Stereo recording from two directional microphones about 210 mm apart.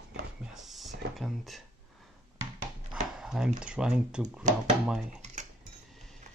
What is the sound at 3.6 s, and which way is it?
Speech, 5° right (ahead or behind).